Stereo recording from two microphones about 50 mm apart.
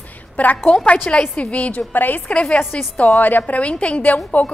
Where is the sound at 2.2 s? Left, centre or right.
Left.